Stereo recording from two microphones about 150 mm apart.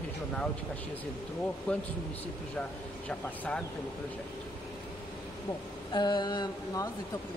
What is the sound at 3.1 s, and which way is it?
Speech, 5° left (ahead or behind).